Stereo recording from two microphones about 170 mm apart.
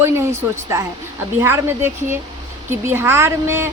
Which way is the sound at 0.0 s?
15° right (ahead or behind).